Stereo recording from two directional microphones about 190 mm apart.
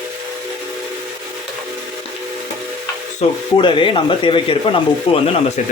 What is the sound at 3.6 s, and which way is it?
Speech, 25° left (ahead or behind).